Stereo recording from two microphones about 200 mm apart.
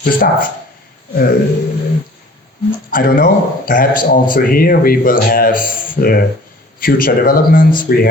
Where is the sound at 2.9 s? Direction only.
45° left (ahead or behind).